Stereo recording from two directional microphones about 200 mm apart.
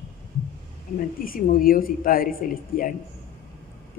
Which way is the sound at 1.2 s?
45° left (ahead or behind).